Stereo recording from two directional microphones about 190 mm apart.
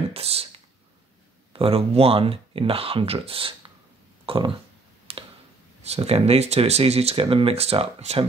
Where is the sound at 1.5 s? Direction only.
30° right (ahead or behind).